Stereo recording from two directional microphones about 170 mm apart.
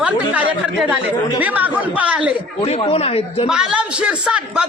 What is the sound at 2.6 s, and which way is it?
Speech, 35° left (ahead or behind).